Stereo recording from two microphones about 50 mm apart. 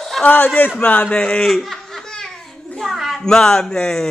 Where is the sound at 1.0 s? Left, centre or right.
Left.